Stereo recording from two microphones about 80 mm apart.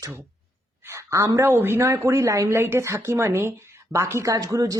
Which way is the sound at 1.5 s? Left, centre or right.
Right.